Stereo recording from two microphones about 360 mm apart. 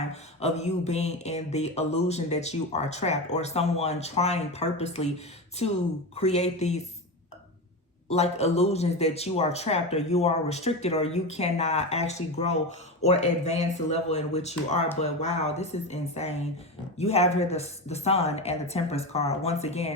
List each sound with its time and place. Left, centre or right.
0.1 s speech: centre
8.1 s speech: centre